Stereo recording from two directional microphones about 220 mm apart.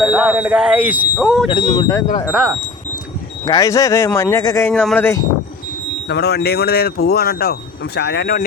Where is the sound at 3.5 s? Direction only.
15° left (ahead or behind).